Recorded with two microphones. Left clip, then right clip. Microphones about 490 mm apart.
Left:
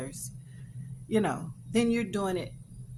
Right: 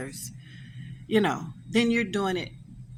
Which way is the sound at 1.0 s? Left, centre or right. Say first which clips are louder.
Right 4 dB; left.